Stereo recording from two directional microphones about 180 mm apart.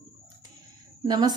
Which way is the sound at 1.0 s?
25° right (ahead or behind).